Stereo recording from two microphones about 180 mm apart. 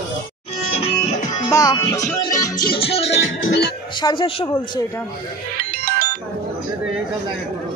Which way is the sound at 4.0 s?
25° left (ahead or behind).